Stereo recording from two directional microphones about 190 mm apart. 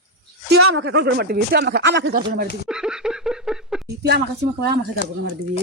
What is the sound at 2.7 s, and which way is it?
Laughter, 5° right (ahead or behind).